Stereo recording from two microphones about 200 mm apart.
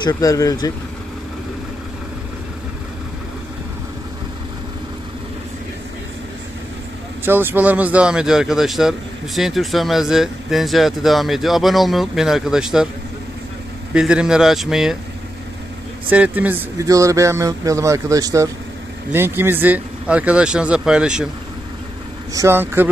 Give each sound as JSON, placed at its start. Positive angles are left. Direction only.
{"t": 0.0, "sound": "speech", "side_deg": 15}
{"t": 7.2, "sound": "speech", "side_deg": -10}
{"t": 13.9, "sound": "speech", "side_deg": -5}
{"t": 16.1, "sound": "speech", "side_deg": -10}
{"t": 22.3, "sound": "speech", "side_deg": -15}